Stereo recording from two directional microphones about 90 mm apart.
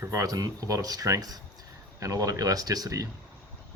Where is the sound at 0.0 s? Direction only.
35° right (ahead or behind).